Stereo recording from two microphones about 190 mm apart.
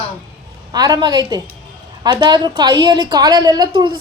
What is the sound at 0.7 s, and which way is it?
A woman's voice, 20° right (ahead or behind).